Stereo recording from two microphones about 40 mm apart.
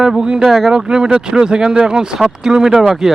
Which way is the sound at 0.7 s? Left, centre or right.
Right.